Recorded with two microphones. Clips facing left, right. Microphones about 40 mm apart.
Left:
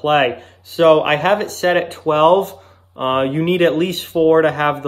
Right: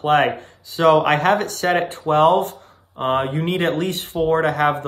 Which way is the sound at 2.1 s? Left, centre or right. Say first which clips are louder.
Left 3 dB; left.